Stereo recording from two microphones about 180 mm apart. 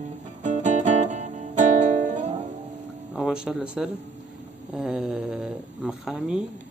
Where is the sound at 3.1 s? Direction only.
5° right (ahead or behind).